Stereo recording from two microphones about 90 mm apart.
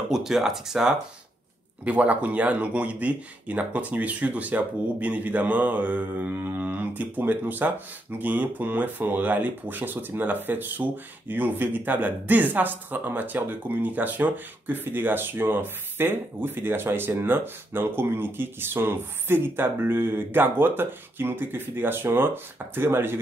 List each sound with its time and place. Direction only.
0.1 s speech: 5° right (ahead or behind); by 23.1 s 25° right (ahead or behind)